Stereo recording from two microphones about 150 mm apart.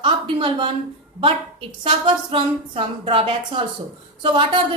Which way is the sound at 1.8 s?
35° right (ahead or behind).